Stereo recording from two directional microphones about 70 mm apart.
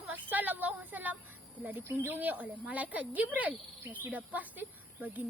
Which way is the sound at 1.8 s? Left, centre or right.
Right.